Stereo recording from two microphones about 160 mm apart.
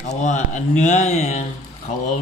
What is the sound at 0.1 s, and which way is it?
Speech, 50° left (ahead or behind).